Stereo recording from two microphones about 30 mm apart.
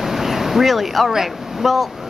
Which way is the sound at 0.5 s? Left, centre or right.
Centre.